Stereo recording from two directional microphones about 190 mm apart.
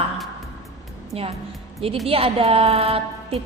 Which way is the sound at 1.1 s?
30° right (ahead or behind).